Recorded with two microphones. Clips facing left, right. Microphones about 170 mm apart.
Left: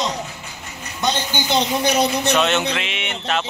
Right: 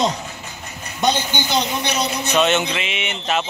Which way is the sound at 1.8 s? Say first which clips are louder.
Left 5 dB; 50° left (ahead or behind).